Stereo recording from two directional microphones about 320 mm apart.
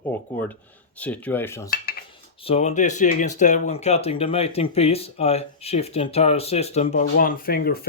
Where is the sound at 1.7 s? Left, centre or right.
Left.